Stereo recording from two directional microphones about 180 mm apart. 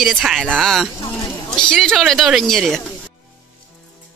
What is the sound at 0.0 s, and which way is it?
Speech, centre (ahead or behind).